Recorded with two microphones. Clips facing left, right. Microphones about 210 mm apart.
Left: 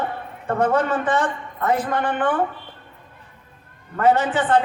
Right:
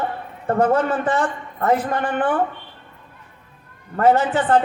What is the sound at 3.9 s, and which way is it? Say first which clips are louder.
Speech: right 2 dB; 40° right (ahead or behind).